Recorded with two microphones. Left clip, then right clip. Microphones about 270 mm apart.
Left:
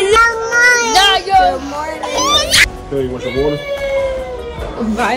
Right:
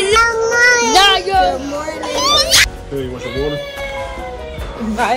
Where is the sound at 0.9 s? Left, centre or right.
Centre.